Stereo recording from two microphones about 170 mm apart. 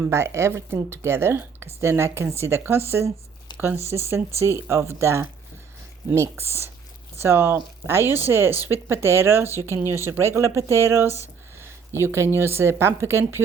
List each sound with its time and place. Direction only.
0.0 s a woman's voice: 15° right (ahead or behind)
3.5 s a sound: 25° left (ahead or behind)
4.1 s a woman's voice: 15° right (ahead or behind)
8.0 s speech: 20° left (ahead or behind)
8.3 s a woman's voice: 15° right (ahead or behind)